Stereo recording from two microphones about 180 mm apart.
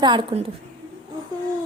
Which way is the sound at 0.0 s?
25° right (ahead or behind).